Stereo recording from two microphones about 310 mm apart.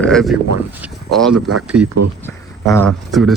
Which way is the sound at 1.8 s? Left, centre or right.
Right.